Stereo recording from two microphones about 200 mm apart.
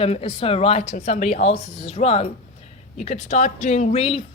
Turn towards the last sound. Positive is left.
turn(degrees=30)  # may be behind; listen again after turning